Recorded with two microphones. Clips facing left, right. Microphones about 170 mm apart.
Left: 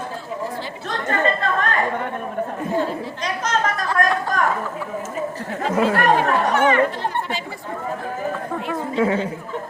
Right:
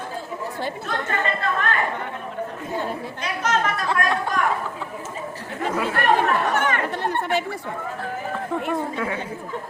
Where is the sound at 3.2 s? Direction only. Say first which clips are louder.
Even; 40° left (ahead or behind).